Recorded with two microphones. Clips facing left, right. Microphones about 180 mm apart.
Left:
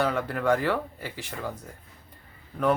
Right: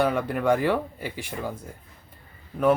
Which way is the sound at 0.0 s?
15° right (ahead or behind).